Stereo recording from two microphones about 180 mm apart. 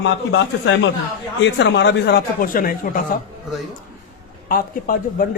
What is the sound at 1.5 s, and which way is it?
Speech, 75° left (ahead or behind).